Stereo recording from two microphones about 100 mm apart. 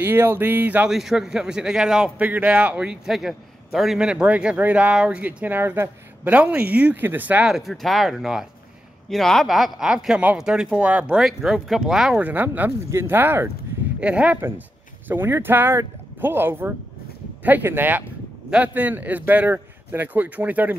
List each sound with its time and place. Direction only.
0.0 s speech: 20° right (ahead or behind)
0.8 s a man's voice: 5° right (ahead or behind)
7.5 s a man's voice: centre (ahead or behind)
11.1 s a man's voice: 5° right (ahead or behind)
12.2 s a man's voice: 15° right (ahead or behind)
15.0 s a man's voice: 25° right (ahead or behind)